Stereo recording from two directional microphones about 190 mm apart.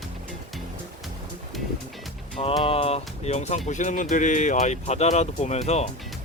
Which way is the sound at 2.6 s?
30° left (ahead or behind).